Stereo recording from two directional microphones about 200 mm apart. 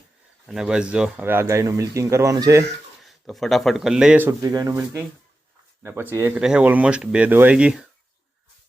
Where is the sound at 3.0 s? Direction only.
Centre (ahead or behind).